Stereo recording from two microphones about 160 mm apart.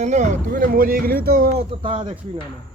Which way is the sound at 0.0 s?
45° right (ahead or behind).